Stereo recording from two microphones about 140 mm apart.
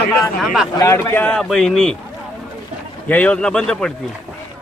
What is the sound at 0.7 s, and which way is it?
A man's voice, 20° left (ahead or behind).